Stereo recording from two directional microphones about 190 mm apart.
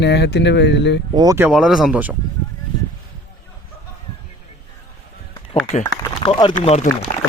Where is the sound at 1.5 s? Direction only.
Centre (ahead or behind).